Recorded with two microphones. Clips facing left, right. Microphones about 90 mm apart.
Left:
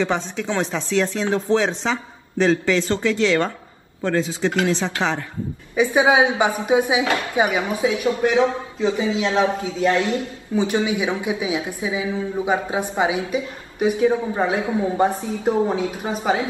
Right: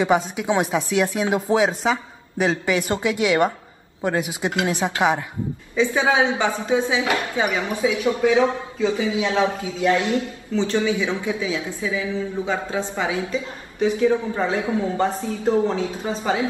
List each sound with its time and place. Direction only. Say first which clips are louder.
0.0 s speech: right 3 dB; 10° right (ahead or behind)
5.8 s a woman's voice: left 3 dB; 15° left (ahead or behind)
9.8 s speech: even; 20° right (ahead or behind)
10.5 s a woman's voice: even; 15° left (ahead or behind)